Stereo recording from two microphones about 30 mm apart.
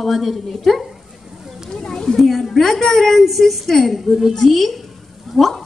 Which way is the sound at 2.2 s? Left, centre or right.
Centre.